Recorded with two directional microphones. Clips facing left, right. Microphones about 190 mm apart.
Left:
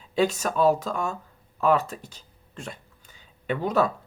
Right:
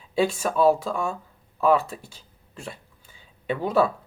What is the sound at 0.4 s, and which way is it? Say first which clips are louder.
Speech: right 2 dB; 10° right (ahead or behind).